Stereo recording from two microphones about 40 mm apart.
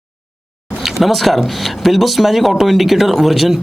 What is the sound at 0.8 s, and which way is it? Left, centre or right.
Speech, centre.